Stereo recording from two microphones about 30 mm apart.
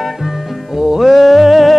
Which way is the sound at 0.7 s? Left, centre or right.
Centre.